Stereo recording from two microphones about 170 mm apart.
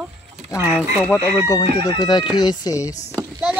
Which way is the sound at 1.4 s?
20° left (ahead or behind).